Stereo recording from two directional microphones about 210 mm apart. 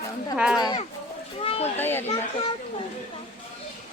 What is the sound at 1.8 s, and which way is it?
Speech, 10° left (ahead or behind).